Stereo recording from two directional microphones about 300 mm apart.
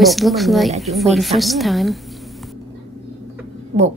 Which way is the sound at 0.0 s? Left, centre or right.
Centre.